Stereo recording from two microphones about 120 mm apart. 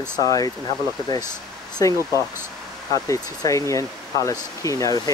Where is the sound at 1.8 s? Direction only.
30° left (ahead or behind).